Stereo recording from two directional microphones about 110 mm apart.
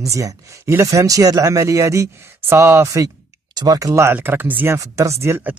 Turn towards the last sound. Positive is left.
turn(degrees=-20)  # may be behind; listen again after turning